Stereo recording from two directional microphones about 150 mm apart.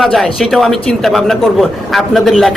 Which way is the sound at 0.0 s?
Centre (ahead or behind).